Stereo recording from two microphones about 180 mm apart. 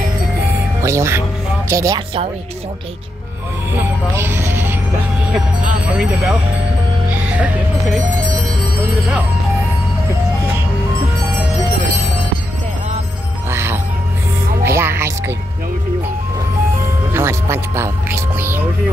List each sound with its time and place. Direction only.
0.8 s speech: 15° right (ahead or behind)
3.8 s music: 10° right (ahead or behind)
5.9 s speech: 10° right (ahead or behind)
7.1 s music: 5° right (ahead or behind)
13.5 s music: 15° right (ahead or behind)
17.1 s speech: 15° right (ahead or behind)